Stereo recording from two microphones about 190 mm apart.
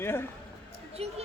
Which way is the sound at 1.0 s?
35° right (ahead or behind).